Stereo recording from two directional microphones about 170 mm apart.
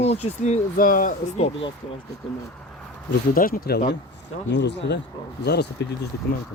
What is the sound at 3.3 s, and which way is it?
Speech, 55° left (ahead or behind).